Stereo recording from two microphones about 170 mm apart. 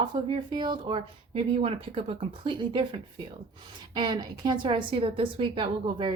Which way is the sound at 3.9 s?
25° right (ahead or behind).